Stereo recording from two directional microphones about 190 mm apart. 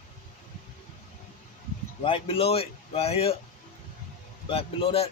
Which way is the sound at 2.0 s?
30° left (ahead or behind).